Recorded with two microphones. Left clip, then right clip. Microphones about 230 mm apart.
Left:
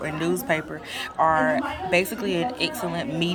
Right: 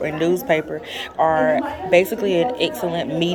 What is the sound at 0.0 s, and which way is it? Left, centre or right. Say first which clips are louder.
Speech: right 6 dB; centre.